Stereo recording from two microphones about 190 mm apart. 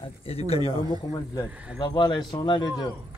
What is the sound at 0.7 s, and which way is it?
Speech, 25° left (ahead or behind).